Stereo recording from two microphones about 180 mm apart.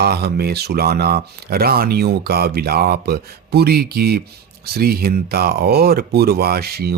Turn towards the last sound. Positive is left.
turn(degrees=-60)  # may be behind; listen again after turning